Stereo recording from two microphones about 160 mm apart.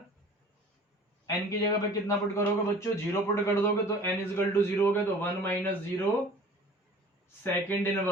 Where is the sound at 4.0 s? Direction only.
15° left (ahead or behind).